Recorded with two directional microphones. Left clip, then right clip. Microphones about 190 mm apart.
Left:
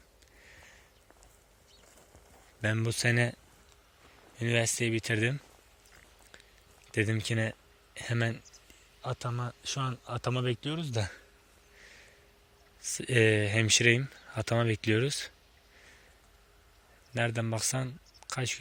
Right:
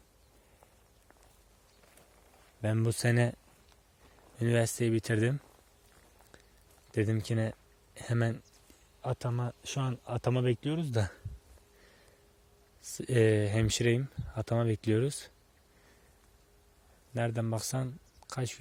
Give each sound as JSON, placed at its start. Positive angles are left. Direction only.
{"t": 2.6, "sound": "speech", "side_deg": -20}
{"t": 2.8, "sound": "speech", "side_deg": -30}
{"t": 4.4, "sound": "speech", "side_deg": -40}
{"t": 6.9, "sound": "speech", "side_deg": -25}
{"t": 9.0, "sound": "speech", "side_deg": -40}
{"t": 12.8, "sound": "speech", "side_deg": -25}
{"t": 17.2, "sound": "speech", "side_deg": -20}